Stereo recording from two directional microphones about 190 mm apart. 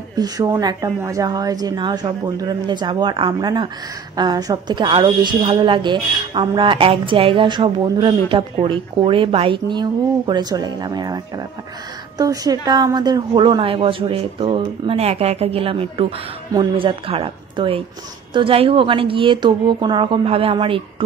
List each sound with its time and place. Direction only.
0.1 s a woman's voice: 20° right (ahead or behind)